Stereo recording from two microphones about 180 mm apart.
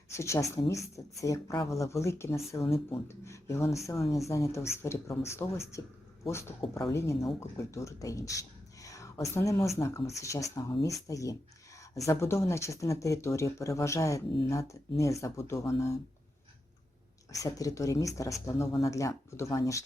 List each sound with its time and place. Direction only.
0.1 s speech: 15° left (ahead or behind)
2.6 s speech: 30° left (ahead or behind)
3.1 s speech: 15° left (ahead or behind)
6.9 s speech: 15° left (ahead or behind)
17.4 s speech: 20° left (ahead or behind)